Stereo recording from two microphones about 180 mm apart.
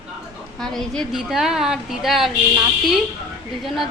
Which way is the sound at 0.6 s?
5° left (ahead or behind).